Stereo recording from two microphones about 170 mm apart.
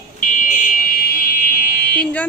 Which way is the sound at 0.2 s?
50° left (ahead or behind).